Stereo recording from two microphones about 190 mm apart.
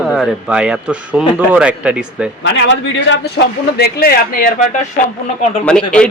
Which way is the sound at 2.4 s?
70° left (ahead or behind).